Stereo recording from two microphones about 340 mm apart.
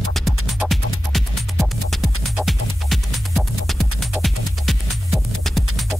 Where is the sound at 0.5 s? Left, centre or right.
Centre.